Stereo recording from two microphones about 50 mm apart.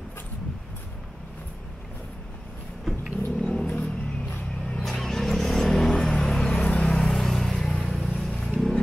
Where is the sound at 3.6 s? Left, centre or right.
Left.